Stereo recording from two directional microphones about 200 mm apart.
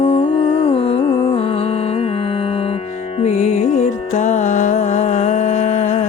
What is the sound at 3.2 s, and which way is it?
Music, 35° left (ahead or behind).